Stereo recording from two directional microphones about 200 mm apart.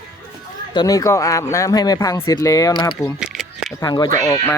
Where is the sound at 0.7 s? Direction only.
20° left (ahead or behind).